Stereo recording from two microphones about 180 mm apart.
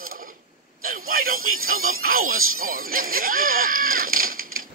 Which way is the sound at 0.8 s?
50° right (ahead or behind).